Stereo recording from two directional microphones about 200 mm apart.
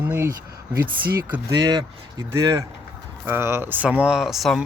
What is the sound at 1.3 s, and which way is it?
Speech, 20° right (ahead or behind).